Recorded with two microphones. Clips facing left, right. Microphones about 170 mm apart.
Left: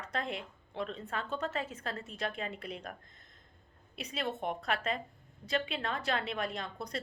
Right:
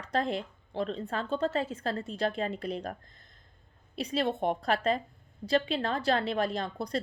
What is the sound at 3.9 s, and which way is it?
A woman's voice, 35° right (ahead or behind).